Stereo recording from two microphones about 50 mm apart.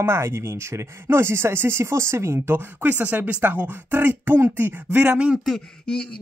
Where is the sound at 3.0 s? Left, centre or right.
Right.